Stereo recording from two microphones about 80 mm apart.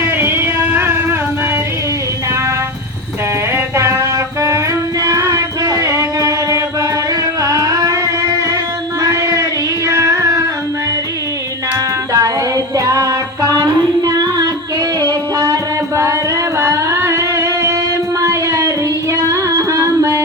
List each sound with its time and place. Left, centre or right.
0.0 s music: right
3.5 s music: right
12.1 s music: right
16.6 s music: right